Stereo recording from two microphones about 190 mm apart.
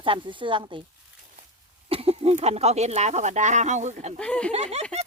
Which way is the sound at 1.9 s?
30° right (ahead or behind).